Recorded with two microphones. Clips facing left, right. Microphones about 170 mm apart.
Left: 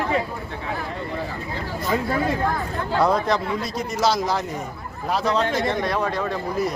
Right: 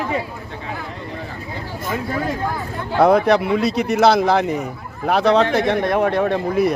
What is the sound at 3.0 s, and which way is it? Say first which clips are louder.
Speech: right 7 dB; 65° right (ahead or behind).